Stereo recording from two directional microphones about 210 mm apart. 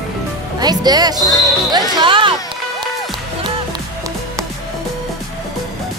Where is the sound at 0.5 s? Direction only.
20° right (ahead or behind).